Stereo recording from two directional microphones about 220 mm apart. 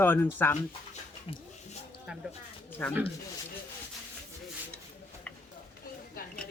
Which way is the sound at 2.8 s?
5° left (ahead or behind).